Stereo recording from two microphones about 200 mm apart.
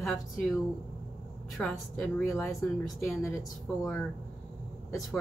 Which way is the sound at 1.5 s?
Centre (ahead or behind).